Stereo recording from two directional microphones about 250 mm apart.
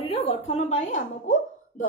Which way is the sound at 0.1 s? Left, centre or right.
Left.